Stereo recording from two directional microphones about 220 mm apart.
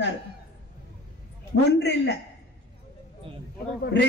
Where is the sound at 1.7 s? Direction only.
50° left (ahead or behind).